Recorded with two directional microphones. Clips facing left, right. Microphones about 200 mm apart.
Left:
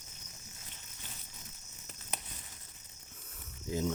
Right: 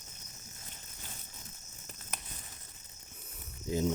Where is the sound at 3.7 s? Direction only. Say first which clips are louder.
Right 3 dB; 15° right (ahead or behind).